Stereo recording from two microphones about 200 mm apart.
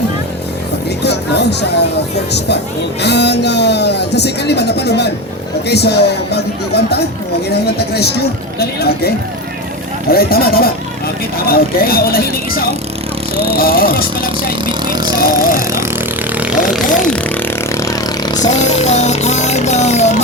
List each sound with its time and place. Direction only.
1.0 s speech: 55° left (ahead or behind)
13.3 s speech: 30° right (ahead or behind)
13.6 s speech: 50° left (ahead or behind)
14.7 s speech: 20° right (ahead or behind)
15.2 s speech: 45° left (ahead or behind)
16.4 s speech: 5° right (ahead or behind)
17.7 s a sound: 15° left (ahead or behind)
18.4 s speech: 35° left (ahead or behind)